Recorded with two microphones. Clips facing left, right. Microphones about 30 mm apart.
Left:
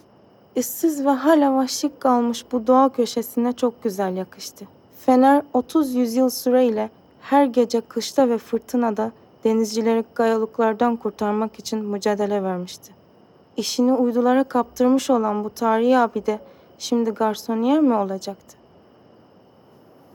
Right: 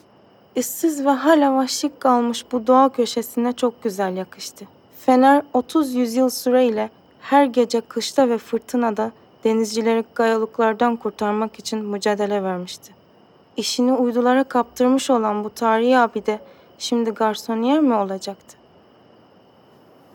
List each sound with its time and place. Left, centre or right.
0.5 s a woman's voice: centre
13.6 s a woman's voice: centre
16.4 s a sound: centre
17.2 s a woman's voice: centre